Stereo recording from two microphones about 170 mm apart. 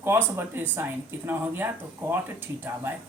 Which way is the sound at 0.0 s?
15° right (ahead or behind).